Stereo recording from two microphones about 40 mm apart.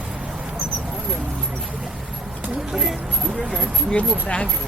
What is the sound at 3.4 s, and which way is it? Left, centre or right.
Speech, centre.